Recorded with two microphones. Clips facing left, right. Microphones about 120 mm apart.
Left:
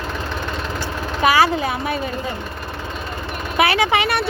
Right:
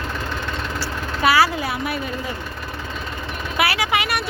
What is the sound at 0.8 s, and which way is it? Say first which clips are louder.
Vehicle: left 3 dB; 20° left (ahead or behind).